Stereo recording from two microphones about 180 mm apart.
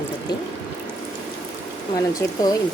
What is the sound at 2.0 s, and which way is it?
Speech, 20° left (ahead or behind).